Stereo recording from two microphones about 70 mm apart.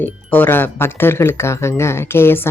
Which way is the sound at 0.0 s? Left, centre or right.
Left.